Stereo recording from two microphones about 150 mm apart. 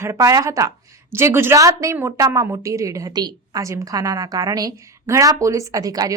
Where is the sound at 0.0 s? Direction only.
20° right (ahead or behind).